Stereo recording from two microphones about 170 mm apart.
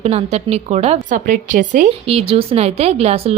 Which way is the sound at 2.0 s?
35° right (ahead or behind).